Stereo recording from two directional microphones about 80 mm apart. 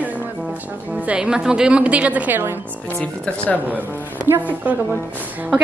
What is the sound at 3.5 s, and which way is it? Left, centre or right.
Speech, right.